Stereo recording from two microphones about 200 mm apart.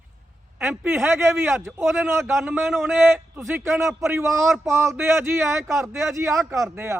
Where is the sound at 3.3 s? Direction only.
10° right (ahead or behind).